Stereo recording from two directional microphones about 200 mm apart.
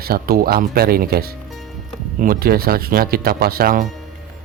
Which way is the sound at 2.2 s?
50° right (ahead or behind).